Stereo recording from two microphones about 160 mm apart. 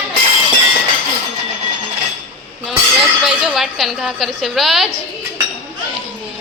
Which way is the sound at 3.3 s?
Centre (ahead or behind).